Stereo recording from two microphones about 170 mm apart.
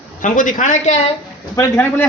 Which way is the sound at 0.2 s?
50° left (ahead or behind).